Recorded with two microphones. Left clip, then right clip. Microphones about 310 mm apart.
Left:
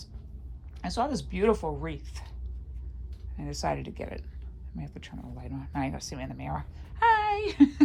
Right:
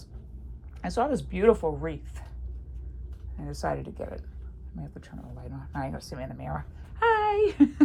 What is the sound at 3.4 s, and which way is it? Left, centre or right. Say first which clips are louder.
Speech: even; centre.